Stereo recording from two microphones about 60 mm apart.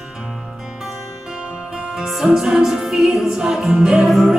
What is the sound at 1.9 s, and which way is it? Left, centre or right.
Music, centre.